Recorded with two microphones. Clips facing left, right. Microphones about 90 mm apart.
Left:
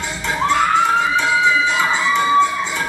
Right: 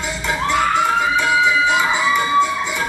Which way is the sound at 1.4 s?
15° right (ahead or behind).